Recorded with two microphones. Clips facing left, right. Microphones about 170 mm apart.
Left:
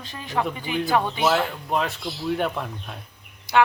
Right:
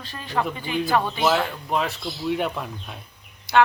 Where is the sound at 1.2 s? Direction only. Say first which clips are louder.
Even; centre (ahead or behind).